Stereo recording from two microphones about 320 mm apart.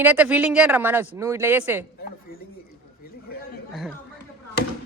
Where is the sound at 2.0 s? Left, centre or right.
Left.